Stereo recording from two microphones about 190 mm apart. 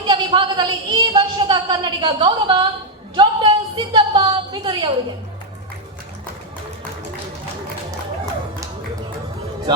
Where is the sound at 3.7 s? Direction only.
25° right (ahead or behind).